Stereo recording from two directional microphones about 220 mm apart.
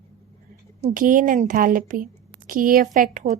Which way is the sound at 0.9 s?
40° right (ahead or behind).